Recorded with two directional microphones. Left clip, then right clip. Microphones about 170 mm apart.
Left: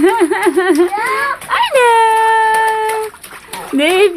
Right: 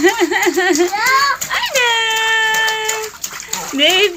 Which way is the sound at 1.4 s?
60° left (ahead or behind).